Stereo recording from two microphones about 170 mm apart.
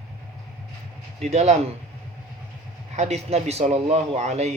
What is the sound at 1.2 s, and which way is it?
Speech, 40° right (ahead or behind).